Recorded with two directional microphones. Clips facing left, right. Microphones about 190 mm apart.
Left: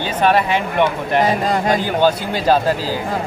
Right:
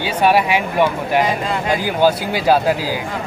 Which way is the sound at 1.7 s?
10° right (ahead or behind).